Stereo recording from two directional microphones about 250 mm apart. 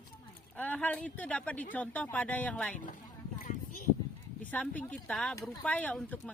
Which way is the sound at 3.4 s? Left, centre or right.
Left.